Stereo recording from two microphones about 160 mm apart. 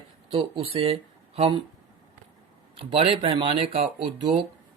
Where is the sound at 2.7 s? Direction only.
35° right (ahead or behind).